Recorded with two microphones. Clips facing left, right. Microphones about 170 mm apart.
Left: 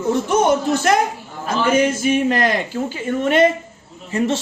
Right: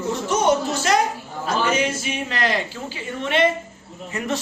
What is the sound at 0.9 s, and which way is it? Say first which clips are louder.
Speech: left 3 dB; 55° left (ahead or behind).